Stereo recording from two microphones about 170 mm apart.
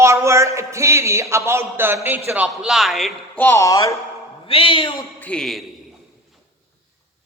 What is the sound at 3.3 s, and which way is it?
Speech, 15° left (ahead or behind).